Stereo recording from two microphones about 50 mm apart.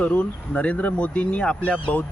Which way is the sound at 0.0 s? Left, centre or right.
Left.